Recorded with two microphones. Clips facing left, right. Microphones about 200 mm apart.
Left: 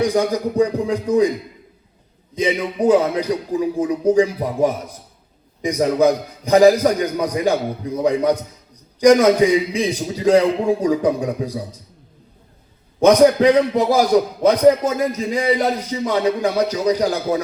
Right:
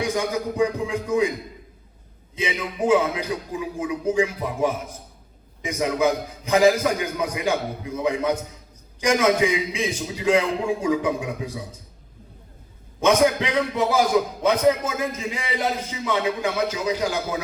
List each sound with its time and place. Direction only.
0.0 s a man's voice: 35° left (ahead or behind)
2.3 s a man's voice: 35° left (ahead or behind)
13.0 s a man's voice: 35° left (ahead or behind)